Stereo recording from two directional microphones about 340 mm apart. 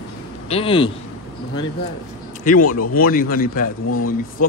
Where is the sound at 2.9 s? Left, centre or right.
Left.